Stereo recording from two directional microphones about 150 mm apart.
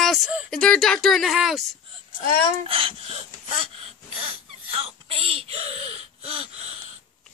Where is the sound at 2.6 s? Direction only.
40° right (ahead or behind).